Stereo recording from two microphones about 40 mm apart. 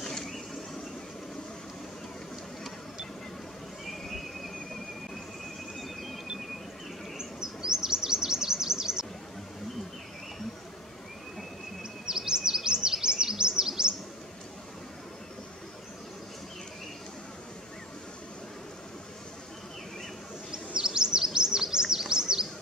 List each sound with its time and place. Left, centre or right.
0.0 s a sound: centre
7.2 s chirp: centre
12.1 s chirp: centre
20.5 s chirp: centre